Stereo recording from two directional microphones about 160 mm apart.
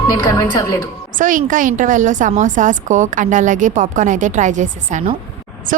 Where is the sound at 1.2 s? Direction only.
55° right (ahead or behind).